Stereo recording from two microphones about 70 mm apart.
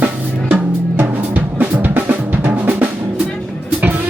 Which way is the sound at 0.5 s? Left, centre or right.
Right.